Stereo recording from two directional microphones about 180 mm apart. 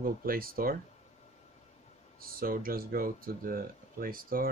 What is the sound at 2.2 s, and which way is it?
Speech, 55° right (ahead or behind).